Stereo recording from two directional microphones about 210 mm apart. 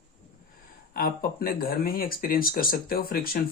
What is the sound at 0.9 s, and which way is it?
Speech, 45° left (ahead or behind).